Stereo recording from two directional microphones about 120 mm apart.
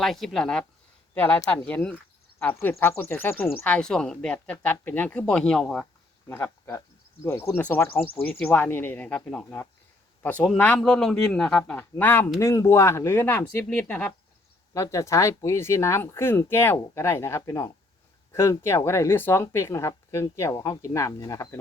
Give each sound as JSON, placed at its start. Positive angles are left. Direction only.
{"t": 0.0, "sound": "a man's voice", "side_deg": 0}
{"t": 6.2, "sound": "a man's voice", "side_deg": 20}
{"t": 11.8, "sound": "speech", "side_deg": 15}
{"t": 14.7, "sound": "speech", "side_deg": 25}